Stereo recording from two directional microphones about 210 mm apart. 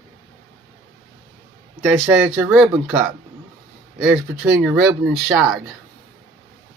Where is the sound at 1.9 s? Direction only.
5° right (ahead or behind).